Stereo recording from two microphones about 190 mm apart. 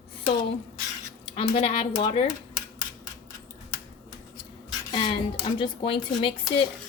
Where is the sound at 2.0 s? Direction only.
25° left (ahead or behind).